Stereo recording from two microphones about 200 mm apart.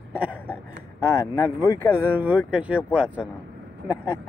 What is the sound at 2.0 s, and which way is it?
Speech, 10° right (ahead or behind).